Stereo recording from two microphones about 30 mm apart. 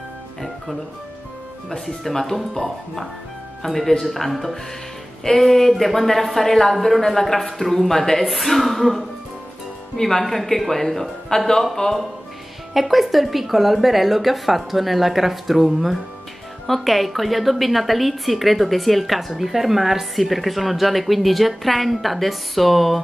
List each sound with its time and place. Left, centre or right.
1.7 s a woman's voice: centre
8.3 s a woman's voice: centre
12.7 s a woman's voice: centre